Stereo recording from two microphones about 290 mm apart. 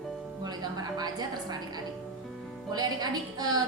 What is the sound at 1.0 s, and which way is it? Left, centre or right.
A woman's voice, centre.